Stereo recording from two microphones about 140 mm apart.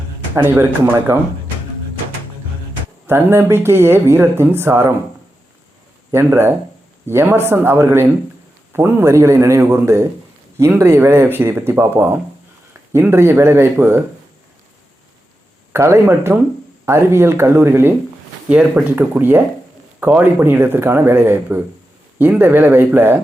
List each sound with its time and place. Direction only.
0.4 s speech: 15° right (ahead or behind)
3.1 s speech: 15° right (ahead or behind)
6.1 s a man's voice: 20° right (ahead or behind)
15.7 s speech: 20° right (ahead or behind)